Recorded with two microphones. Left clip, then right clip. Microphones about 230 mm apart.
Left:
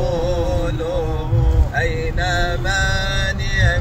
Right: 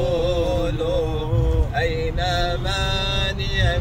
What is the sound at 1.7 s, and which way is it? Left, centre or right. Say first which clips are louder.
Mantra: left 3 dB; centre.